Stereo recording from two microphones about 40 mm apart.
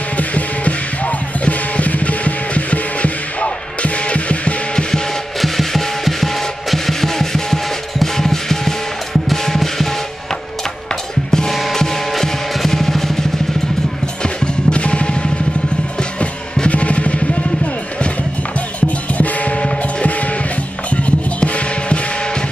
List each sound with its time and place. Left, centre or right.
0.2 s music: left
5.4 s music: centre
11.2 s music: centre
11.5 s music: centre
14.2 s music: left
18.8 s music: left
20.9 s music: left